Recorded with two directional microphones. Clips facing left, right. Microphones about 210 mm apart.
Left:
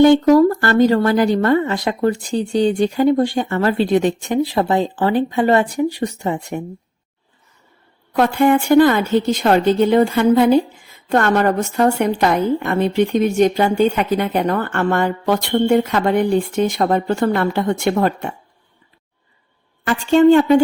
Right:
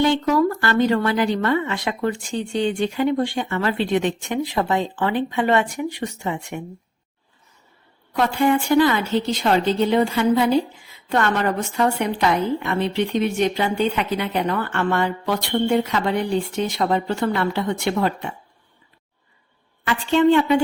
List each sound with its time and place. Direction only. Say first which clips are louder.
0.0 s a woman's voice: left 8 dB; 45° left (ahead or behind)
8.1 s a woman's voice: left 4 dB; 55° left (ahead or behind)
19.8 s a woman's voice: left 5 dB; 45° left (ahead or behind)